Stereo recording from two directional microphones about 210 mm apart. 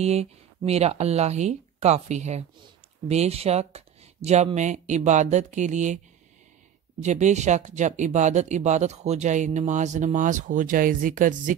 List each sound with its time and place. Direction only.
0.0 s speech: 30° right (ahead or behind)
7.0 s speech: 35° right (ahead or behind)